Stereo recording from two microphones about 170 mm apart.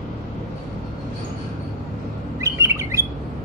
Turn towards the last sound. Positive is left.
turn(degrees=-15)  # may be behind; listen again after turning